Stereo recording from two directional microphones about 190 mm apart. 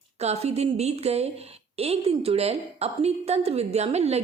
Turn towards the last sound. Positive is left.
turn(degrees=-35)  # may be behind; listen again after turning